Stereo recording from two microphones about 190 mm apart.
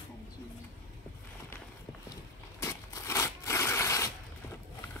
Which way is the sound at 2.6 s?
15° left (ahead or behind).